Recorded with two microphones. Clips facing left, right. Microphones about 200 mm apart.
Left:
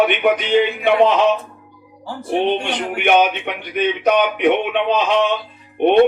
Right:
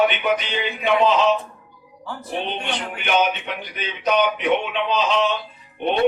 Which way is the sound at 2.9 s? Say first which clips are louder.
Left 6 dB; 60° left (ahead or behind).